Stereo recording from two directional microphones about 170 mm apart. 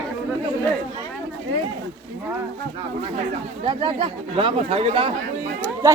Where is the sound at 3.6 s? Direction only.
30° right (ahead or behind).